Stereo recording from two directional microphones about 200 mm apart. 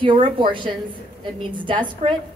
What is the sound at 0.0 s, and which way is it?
A woman's voice, 25° right (ahead or behind).